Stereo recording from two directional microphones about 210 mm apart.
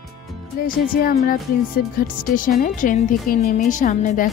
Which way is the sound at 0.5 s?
45° left (ahead or behind).